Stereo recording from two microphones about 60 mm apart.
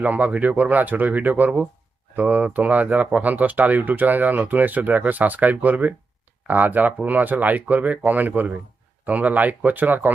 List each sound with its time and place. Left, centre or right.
0.0 s speech: right